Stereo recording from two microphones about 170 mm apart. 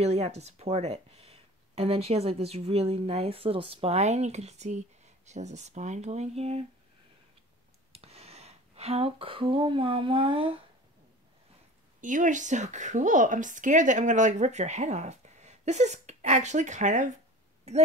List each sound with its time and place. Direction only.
0.0 s speech: 40° right (ahead or behind)
7.9 s a sound: 35° right (ahead or behind)
12.0 s a woman's voice: 50° right (ahead or behind)